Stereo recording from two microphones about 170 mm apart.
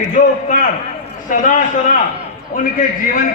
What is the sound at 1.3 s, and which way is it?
Speech, 50° left (ahead or behind).